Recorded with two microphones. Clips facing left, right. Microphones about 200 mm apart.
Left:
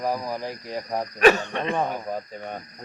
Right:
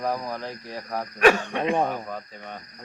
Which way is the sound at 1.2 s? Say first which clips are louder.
Left 1 dB; 10° right (ahead or behind).